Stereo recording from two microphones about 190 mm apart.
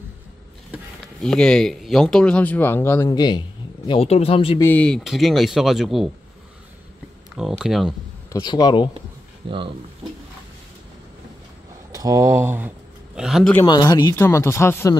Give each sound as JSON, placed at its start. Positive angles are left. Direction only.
{"t": 0.7, "sound": "speech", "side_deg": 0}
{"t": 3.1, "sound": "a man's voice", "side_deg": 25}
{"t": 4.6, "sound": "speech", "side_deg": 10}
{"t": 7.3, "sound": "speech", "side_deg": -5}
{"t": 8.3, "sound": "speech", "side_deg": 20}
{"t": 9.4, "sound": "speech", "side_deg": -25}
{"t": 11.9, "sound": "speech", "side_deg": -15}
{"t": 13.7, "sound": "speech", "side_deg": 20}